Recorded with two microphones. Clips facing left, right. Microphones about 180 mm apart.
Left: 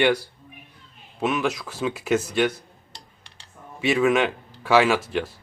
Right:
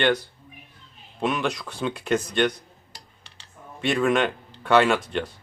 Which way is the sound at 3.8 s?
5° left (ahead or behind).